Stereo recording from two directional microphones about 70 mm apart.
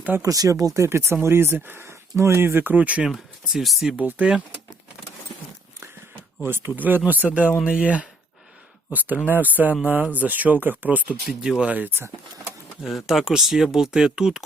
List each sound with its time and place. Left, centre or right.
0.2 s speech: right
0.9 s speech: right
3.1 s speech: centre
3.9 s speech: centre
6.4 s speech: right
11.3 s speech: centre
11.7 s speech: right
12.8 s speech: centre